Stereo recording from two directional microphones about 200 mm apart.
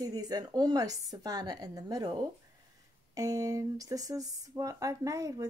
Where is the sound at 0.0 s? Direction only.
20° right (ahead or behind).